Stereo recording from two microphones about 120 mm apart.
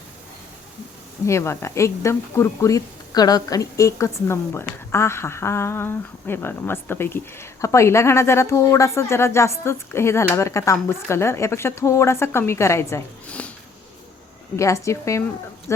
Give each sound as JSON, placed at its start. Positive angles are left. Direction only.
{"t": 1.3, "sound": "speech", "side_deg": 25}
{"t": 13.2, "sound": "sniff", "side_deg": 10}
{"t": 14.5, "sound": "speech", "side_deg": 25}